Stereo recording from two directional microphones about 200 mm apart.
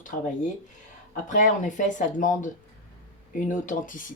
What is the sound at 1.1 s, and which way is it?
Speech, 40° left (ahead or behind).